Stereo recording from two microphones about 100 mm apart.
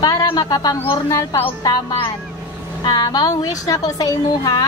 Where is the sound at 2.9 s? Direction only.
40° left (ahead or behind).